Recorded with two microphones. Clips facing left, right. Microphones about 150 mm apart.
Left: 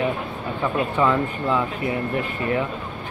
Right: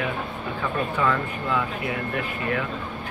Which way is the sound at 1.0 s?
25° left (ahead or behind).